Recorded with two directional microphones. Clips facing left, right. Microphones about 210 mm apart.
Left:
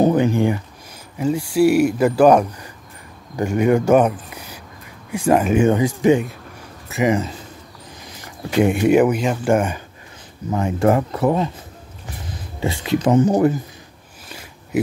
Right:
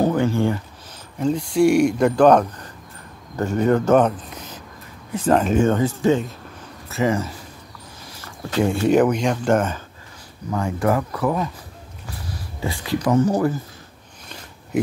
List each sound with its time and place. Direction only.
0.0 s a sound: 15° left (ahead or behind)
1.1 s speech: 5° left (ahead or behind)
10.5 s speech: 25° left (ahead or behind)